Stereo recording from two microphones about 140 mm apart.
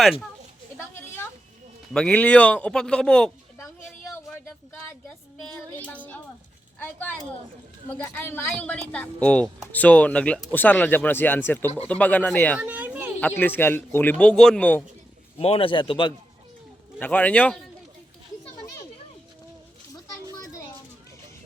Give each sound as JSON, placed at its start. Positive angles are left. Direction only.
{"t": 0.0, "sound": "speech", "side_deg": 0}
{"t": 0.9, "sound": "a sound", "side_deg": 15}
{"t": 1.9, "sound": "speech", "side_deg": 5}
{"t": 3.6, "sound": "a sound", "side_deg": 20}
{"t": 4.7, "sound": "speech", "side_deg": 10}
{"t": 12.5, "sound": "a sound", "side_deg": -10}
{"t": 13.1, "sound": "speech", "side_deg": 10}
{"t": 15.4, "sound": "a man's voice", "side_deg": 40}
{"t": 17.0, "sound": "speech", "side_deg": 10}
{"t": 18.5, "sound": "children playing", "side_deg": 25}
{"t": 20.3, "sound": "children playing", "side_deg": 25}